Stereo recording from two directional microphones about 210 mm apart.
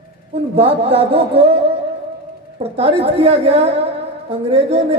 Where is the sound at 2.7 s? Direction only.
30° right (ahead or behind).